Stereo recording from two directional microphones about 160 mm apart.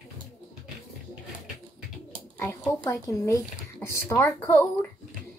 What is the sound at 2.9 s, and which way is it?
A woman's voice, 20° left (ahead or behind).